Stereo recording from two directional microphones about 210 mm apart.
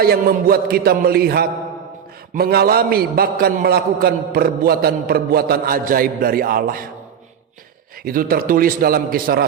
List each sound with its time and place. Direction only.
0.0 s a man's voice: 45° right (ahead or behind)
8.0 s a man's voice: 45° right (ahead or behind)